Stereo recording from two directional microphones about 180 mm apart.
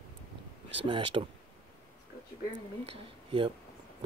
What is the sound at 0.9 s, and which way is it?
Speech, 30° right (ahead or behind).